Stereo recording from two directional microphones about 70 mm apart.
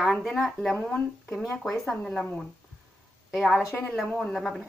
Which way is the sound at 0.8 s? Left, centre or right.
Centre.